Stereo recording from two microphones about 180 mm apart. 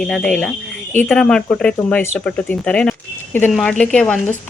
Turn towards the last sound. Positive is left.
turn(degrees=5)  # may be behind; listen again after turning